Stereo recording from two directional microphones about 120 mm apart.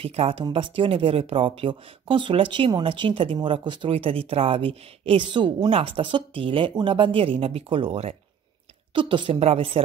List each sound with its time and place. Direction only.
0.0 s speech: 55° right (ahead or behind)
8.9 s speech: 45° right (ahead or behind)